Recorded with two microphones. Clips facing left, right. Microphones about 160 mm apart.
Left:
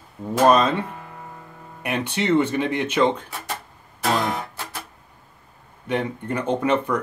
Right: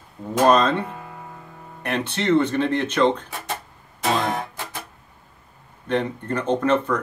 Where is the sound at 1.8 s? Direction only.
10° left (ahead or behind).